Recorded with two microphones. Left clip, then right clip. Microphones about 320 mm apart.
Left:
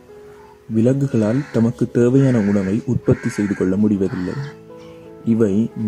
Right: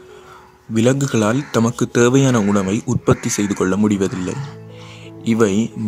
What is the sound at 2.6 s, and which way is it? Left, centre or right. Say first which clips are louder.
Speech: right 2 dB; right.